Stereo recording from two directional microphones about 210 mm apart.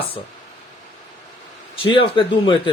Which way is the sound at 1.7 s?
25° left (ahead or behind).